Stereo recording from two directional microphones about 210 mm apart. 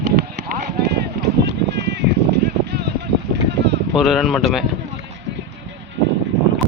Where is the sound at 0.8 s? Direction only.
50° right (ahead or behind).